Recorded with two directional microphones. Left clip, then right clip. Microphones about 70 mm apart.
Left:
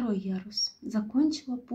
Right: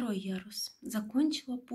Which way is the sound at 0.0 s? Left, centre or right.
Centre.